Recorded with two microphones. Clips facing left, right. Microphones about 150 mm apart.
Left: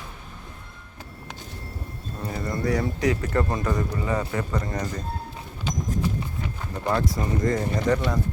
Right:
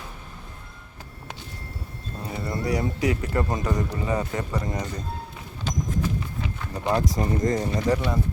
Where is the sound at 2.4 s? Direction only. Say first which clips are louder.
Left 1 dB; 15° right (ahead or behind).